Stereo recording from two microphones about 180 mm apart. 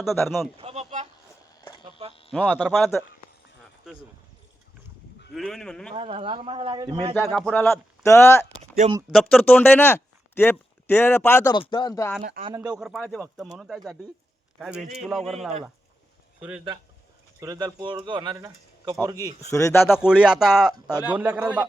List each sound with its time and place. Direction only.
0.0 s speech: centre (ahead or behind)
0.5 s a sound: 35° right (ahead or behind)
2.3 s speech: 5° left (ahead or behind)
5.3 s speech: centre (ahead or behind)
5.9 s speech: 30° right (ahead or behind)
7.3 s speech: centre (ahead or behind)
8.0 s speech: 15° left (ahead or behind)
8.8 s speech: 40° right (ahead or behind)
9.1 s speech: 5° left (ahead or behind)
11.5 s speech: 25° left (ahead or behind)
12.5 s speech: 5° right (ahead or behind)
17.4 s speech: 20° right (ahead or behind)
19.4 s speech: 15° left (ahead or behind)
20.0 s a man's voice: 5° right (ahead or behind)